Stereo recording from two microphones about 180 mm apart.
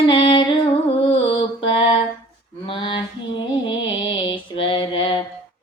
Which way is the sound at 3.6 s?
25° left (ahead or behind).